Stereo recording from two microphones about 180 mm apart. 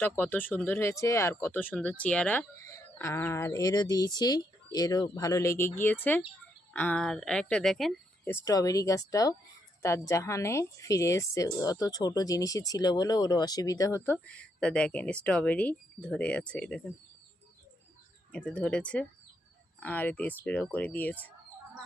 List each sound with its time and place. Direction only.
0.0 s a woman's voice: 10° left (ahead or behind)
8.3 s a woman's voice: 20° left (ahead or behind)
18.3 s a woman's voice: 5° left (ahead or behind)